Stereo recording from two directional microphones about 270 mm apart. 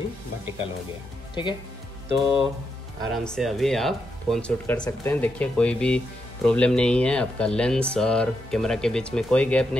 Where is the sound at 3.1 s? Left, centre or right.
Centre.